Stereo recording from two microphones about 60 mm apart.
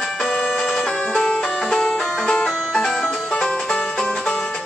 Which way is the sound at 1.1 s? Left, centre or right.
Centre.